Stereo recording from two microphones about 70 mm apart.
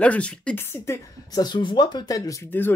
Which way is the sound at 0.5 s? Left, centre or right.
Left.